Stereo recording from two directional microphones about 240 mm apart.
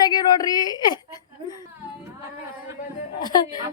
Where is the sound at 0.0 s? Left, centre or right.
Centre.